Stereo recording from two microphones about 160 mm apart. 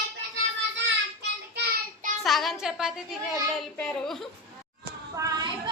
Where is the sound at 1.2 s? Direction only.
90° right.